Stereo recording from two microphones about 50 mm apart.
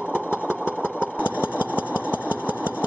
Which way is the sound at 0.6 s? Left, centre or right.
Right.